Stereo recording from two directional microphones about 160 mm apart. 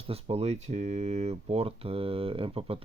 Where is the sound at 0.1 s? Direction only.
40° right (ahead or behind).